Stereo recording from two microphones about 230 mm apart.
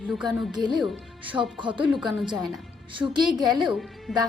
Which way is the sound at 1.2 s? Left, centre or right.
Right.